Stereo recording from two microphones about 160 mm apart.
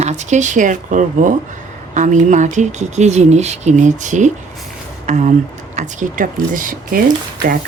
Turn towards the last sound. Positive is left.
turn(degrees=-65)  # may be behind; listen again after turning